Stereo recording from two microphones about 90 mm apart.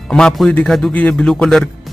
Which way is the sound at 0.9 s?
15° left (ahead or behind).